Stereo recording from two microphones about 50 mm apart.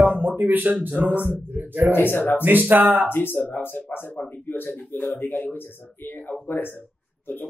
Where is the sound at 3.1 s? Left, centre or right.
Left.